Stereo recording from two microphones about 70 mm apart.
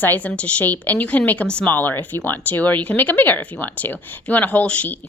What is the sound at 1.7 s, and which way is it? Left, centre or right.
Speech, left.